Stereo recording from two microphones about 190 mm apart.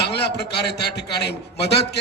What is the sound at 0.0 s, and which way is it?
A man's voice, 60° left (ahead or behind).